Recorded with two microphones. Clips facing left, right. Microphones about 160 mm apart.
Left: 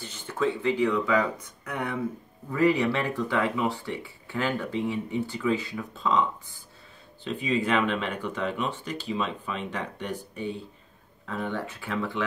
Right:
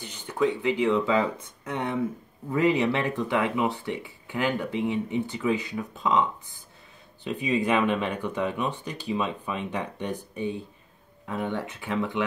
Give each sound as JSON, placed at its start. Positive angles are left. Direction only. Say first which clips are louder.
{"t": 0.0, "sound": "speech", "louder": "right 2 dB", "side_deg": -15}